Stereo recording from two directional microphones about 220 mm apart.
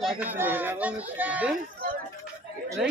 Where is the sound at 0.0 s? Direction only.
5° right (ahead or behind).